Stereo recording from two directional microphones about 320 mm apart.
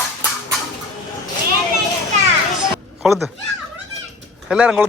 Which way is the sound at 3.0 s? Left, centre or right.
Centre.